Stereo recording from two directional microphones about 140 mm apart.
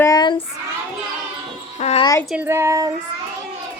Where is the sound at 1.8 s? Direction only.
50° left (ahead or behind).